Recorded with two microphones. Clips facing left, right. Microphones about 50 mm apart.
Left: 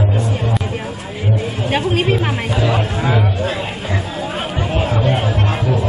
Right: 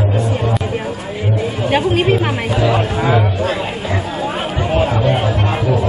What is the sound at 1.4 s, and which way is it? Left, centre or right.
Chatter, centre.